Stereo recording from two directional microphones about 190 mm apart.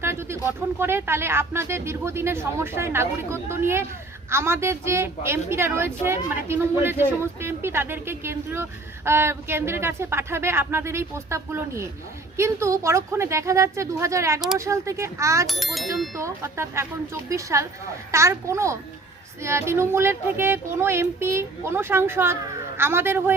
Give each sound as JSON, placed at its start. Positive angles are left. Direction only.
{"t": 0.0, "sound": "a woman's voice", "side_deg": -15}
{"t": 15.4, "sound": "speech", "side_deg": 0}
{"t": 16.1, "sound": "a woman's voice", "side_deg": -15}